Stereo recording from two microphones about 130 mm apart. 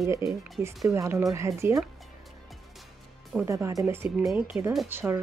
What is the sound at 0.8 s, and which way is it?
Speech, 20° right (ahead or behind).